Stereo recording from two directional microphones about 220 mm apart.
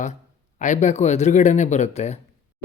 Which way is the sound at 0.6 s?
35° left (ahead or behind).